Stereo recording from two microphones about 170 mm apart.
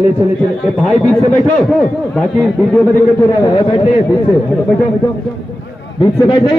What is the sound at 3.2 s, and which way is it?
Speech, 15° left (ahead or behind).